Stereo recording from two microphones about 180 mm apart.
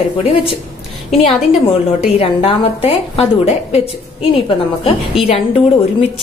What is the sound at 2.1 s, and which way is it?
A woman's voice, 30° left (ahead or behind).